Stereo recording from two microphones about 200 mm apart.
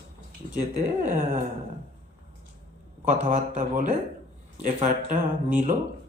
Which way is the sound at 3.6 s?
40° right (ahead or behind).